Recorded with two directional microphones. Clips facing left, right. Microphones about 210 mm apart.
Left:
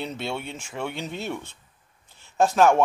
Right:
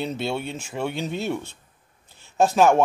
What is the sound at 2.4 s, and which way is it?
Speech, 5° right (ahead or behind).